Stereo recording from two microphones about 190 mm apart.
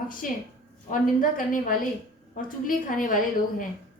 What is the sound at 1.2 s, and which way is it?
A woman's voice, 45° left (ahead or behind).